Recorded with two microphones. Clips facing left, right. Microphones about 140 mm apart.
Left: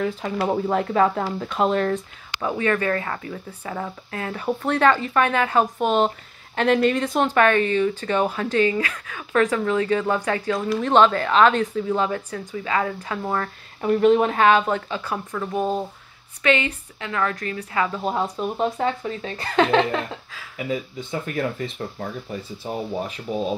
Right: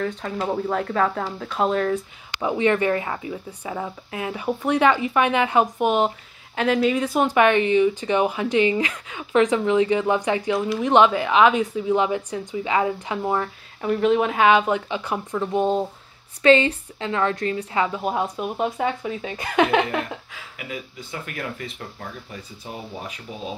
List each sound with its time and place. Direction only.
0.0 s speech: 5° left (ahead or behind)
2.4 s speech: 20° right (ahead or behind)
13.7 s a woman's voice: centre (ahead or behind); by 17.9 s 25° right (ahead or behind)
17.9 s speech: 10° right (ahead or behind)
20.5 s speech: 35° left (ahead or behind)